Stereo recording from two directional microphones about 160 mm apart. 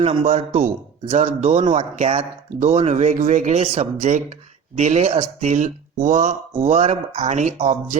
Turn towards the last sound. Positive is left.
turn(degrees=-45)  # may be behind; listen again after turning